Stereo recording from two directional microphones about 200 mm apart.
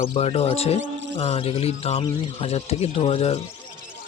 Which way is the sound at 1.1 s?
30° left (ahead or behind).